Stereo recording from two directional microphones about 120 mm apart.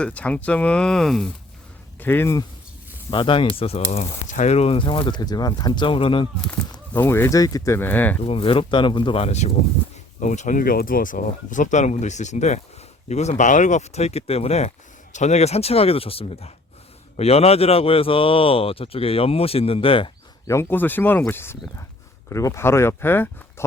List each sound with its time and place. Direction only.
0.0 s speech: 10° left (ahead or behind)
2.0 s speech: 20° left (ahead or behind)
3.1 s speech: 45° left (ahead or behind)
6.5 s speech: 20° left (ahead or behind)
8.2 s speech: 50° left (ahead or behind)
10.2 s speech: 90° left; by 14.7 s 60° left (ahead or behind)
15.1 s speech: 70° left (ahead or behind); by 20.1 s 50° left (ahead or behind)
20.5 s speech: 20° left (ahead or behind)